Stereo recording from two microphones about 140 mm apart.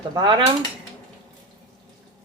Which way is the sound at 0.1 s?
30° right (ahead or behind).